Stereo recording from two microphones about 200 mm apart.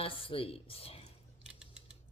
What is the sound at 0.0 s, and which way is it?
Speech, 25° left (ahead or behind).